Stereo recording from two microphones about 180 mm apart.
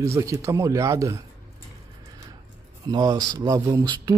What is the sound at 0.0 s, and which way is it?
Speech, 15° right (ahead or behind).